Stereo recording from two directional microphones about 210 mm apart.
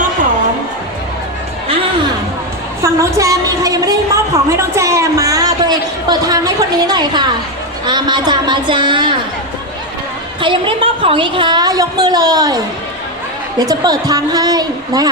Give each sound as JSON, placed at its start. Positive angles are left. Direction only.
{"t": 2.8, "sound": "a sound", "side_deg": -15}
{"t": 7.9, "sound": "a woman's voice", "side_deg": -20}
{"t": 10.4, "sound": "a woman's voice", "side_deg": -25}
{"t": 13.6, "sound": "a woman's voice", "side_deg": -20}